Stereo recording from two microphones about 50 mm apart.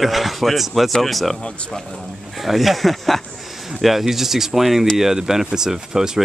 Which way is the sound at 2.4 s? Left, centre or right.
Centre.